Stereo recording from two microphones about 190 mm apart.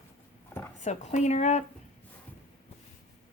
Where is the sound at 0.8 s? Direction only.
40° left (ahead or behind).